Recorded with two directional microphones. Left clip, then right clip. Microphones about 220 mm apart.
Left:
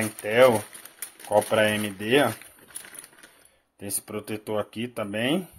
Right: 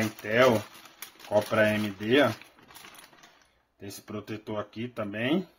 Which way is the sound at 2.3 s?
Centre (ahead or behind).